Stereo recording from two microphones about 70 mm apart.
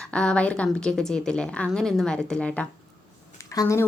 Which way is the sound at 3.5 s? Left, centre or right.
Left.